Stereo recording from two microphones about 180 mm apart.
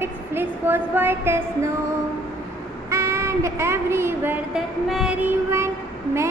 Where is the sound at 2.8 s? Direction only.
15° right (ahead or behind).